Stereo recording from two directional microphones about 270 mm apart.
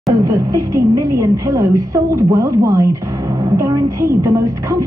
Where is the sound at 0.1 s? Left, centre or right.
Centre.